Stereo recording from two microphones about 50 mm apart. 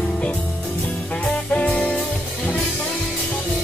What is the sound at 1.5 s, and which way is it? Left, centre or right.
Music, left.